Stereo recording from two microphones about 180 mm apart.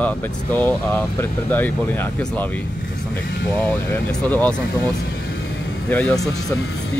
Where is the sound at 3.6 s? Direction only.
10° left (ahead or behind).